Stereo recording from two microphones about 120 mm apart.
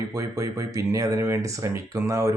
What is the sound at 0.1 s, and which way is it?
Speech, 30° right (ahead or behind).